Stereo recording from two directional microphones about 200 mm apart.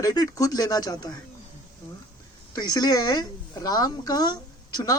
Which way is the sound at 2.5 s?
20° left (ahead or behind).